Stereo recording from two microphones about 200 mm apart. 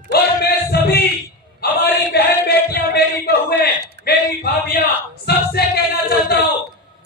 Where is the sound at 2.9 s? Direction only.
50° left (ahead or behind).